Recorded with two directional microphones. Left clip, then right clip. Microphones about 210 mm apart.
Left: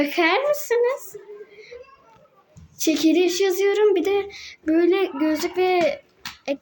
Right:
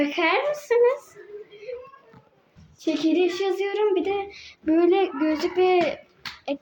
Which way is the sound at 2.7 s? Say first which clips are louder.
Left 4 dB; 20° left (ahead or behind).